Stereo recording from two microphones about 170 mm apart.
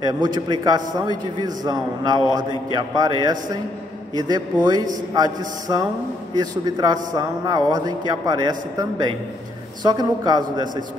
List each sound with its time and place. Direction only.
0.0 s a man's voice: 25° right (ahead or behind)